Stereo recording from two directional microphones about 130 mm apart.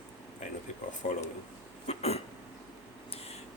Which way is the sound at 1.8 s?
55° left (ahead or behind).